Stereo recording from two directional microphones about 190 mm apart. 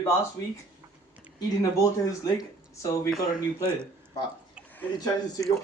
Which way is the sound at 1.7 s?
15° left (ahead or behind).